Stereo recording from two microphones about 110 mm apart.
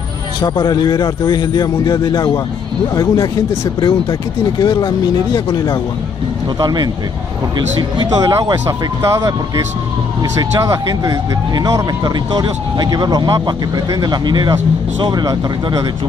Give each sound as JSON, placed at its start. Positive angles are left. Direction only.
{"t": 0.4, "sound": "speech", "side_deg": 40}
{"t": 6.6, "sound": "speech", "side_deg": -40}
{"t": 8.1, "sound": "speech", "side_deg": -30}
{"t": 10.6, "sound": "speech", "side_deg": -30}